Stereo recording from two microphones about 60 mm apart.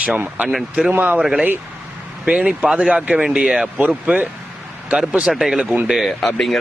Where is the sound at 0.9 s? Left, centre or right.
Right.